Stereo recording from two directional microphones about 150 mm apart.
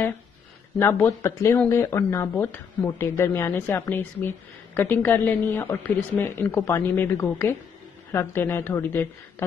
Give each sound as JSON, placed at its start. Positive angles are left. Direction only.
{"t": 0.7, "sound": "speech", "side_deg": 15}